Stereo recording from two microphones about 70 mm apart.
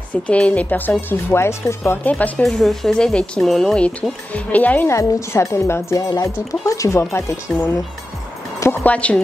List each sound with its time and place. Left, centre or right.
0.1 s a woman's voice: centre
1.3 s a woman's voice: left
2.0 s a woman's voice: left
2.4 s speech: centre
4.3 s a woman's voice: left
4.8 s a woman's voice: left
5.9 s speech: left
8.8 s a woman's voice: centre